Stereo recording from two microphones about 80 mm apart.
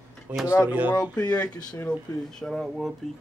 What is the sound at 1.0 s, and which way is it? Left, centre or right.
Speech, left.